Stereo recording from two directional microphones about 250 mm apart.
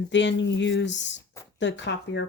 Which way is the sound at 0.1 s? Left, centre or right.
Left.